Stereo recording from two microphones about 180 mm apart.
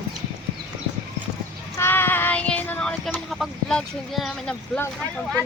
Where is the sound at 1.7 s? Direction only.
15° left (ahead or behind).